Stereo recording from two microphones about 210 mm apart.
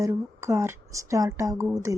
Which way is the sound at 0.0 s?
15° right (ahead or behind).